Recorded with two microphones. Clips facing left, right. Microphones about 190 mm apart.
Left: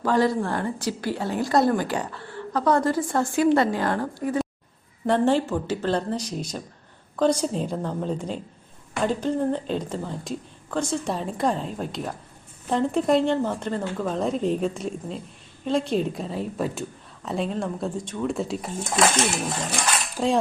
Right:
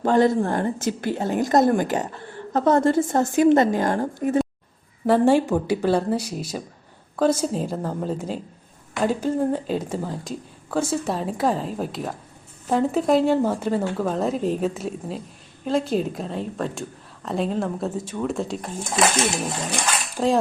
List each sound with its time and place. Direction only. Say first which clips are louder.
0.0 s a woman's voice: right 3 dB; 25° right (ahead or behind)
5.0 s a woman's voice: right 4 dB; 10° right (ahead or behind)